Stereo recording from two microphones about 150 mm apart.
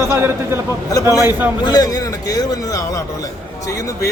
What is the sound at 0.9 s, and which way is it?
A man's voice, 25° left (ahead or behind).